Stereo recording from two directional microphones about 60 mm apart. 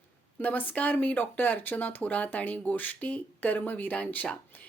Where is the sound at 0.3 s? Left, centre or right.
Left.